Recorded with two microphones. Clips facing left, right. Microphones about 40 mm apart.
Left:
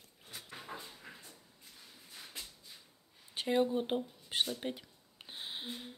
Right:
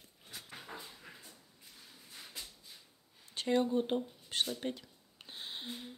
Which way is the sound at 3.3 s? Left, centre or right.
Centre.